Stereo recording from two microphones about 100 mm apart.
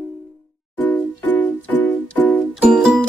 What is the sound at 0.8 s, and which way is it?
Music, 20° left (ahead or behind).